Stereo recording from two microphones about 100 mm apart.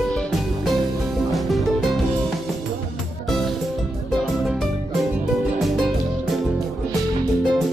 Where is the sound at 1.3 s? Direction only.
Centre (ahead or behind).